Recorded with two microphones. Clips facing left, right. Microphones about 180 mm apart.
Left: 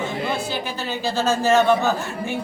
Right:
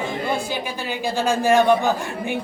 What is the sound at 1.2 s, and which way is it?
Speech, 15° right (ahead or behind).